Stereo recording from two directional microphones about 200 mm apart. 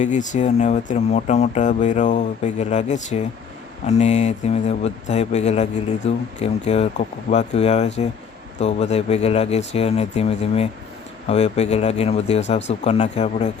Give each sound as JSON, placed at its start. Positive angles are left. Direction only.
{"t": 0.0, "sound": "speech", "side_deg": 40}